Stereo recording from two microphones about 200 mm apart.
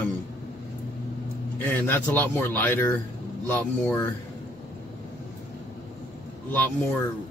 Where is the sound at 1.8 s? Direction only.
10° left (ahead or behind).